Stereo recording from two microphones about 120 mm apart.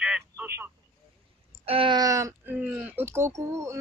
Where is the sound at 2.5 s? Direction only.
10° right (ahead or behind).